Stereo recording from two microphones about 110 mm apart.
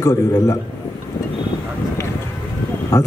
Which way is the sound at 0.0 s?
30° left (ahead or behind).